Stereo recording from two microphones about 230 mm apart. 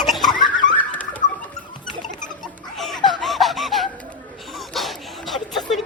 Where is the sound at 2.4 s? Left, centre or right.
Centre.